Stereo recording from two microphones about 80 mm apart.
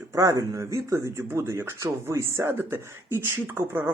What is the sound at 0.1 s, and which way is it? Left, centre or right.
Speech, right.